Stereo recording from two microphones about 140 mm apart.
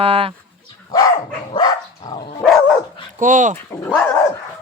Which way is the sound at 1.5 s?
30° left (ahead or behind).